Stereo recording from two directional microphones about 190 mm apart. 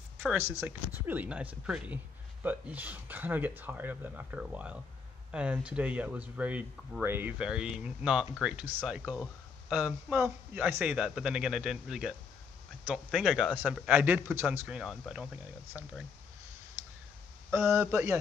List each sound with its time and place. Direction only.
0.6 s a man's voice: 10° right (ahead or behind)
17.5 s speech: 15° right (ahead or behind)